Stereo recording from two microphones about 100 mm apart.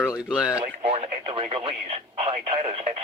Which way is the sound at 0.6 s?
75° right (ahead or behind).